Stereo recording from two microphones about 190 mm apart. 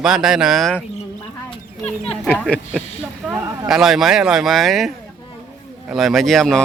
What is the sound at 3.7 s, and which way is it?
Speech, centre (ahead or behind).